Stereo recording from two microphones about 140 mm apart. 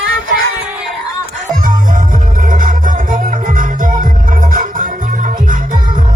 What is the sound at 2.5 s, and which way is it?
Music, 70° right (ahead or behind).